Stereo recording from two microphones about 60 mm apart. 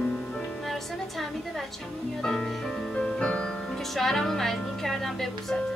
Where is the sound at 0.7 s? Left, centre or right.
Centre.